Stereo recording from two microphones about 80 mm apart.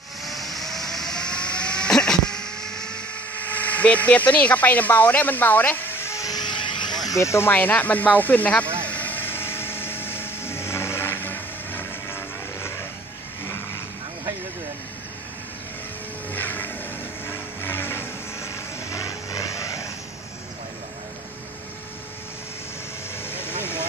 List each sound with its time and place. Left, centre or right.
0.2 s a sound: centre
3.4 s speech: left
6.2 s a sound: left
7.1 s speech: left; by 8.6 s centre
8.8 s vehicle: left
16.3 s vehicle: left
23.2 s vehicle: left